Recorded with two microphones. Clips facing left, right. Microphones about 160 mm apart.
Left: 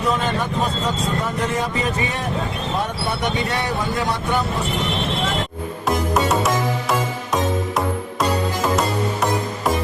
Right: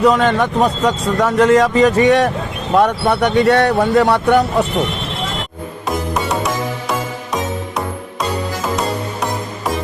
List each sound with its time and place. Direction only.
0.0 s speech: 75° right (ahead or behind)
2.7 s speech: 70° right (ahead or behind)
6.1 s music: centre (ahead or behind)